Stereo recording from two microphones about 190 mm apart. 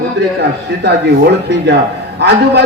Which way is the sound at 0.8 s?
65° right (ahead or behind).